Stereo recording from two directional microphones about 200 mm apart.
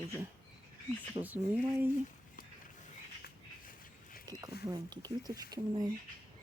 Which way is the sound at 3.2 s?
45° left (ahead or behind).